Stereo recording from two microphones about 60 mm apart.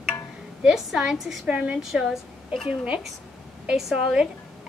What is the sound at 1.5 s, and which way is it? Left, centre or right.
Speech, centre.